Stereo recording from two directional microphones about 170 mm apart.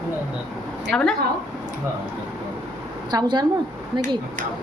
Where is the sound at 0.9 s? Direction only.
5° left (ahead or behind).